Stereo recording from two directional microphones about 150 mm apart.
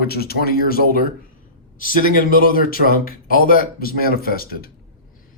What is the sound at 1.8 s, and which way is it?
Speech, 65° left (ahead or behind).